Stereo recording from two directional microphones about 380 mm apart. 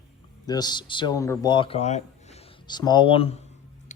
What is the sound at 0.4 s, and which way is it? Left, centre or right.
Speech, centre.